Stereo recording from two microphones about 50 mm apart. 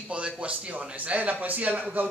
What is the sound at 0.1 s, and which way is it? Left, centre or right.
A man's voice, right.